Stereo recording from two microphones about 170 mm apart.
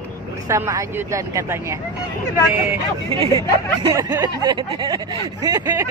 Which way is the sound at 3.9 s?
20° right (ahead or behind).